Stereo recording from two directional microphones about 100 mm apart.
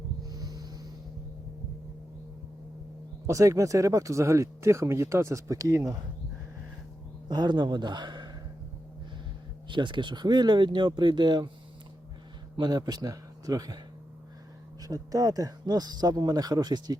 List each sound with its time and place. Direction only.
0.3 s music: 40° right (ahead or behind)
3.2 s speech: 30° right (ahead or behind)
7.3 s speech: 45° right (ahead or behind)
9.6 s speech: 55° right (ahead or behind)
12.5 s speech: 45° right (ahead or behind)
14.8 s speech: 35° right (ahead or behind)